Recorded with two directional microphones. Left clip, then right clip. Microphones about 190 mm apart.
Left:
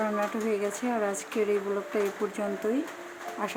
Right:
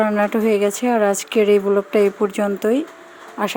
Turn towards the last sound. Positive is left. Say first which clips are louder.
# right 9 dB
turn(degrees=-50)  # may be behind; listen again after turning